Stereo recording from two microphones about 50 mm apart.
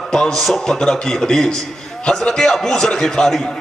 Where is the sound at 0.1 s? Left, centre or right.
Centre.